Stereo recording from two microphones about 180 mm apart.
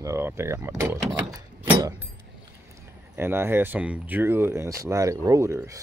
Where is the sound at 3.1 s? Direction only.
15° right (ahead or behind).